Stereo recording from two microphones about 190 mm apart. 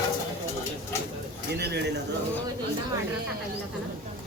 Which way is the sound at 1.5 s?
60° right (ahead or behind).